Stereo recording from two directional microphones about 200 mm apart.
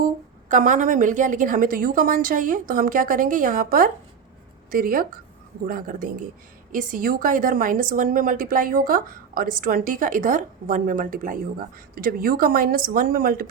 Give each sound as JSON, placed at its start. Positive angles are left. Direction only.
{"t": 0.0, "sound": "a woman's voice", "side_deg": -40}